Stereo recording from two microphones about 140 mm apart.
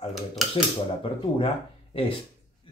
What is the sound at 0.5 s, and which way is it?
Speech, 40° left (ahead or behind).